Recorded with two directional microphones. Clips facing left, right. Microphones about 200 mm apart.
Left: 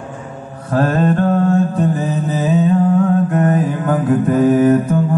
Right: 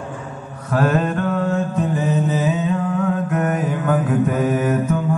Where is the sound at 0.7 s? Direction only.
35° left (ahead or behind).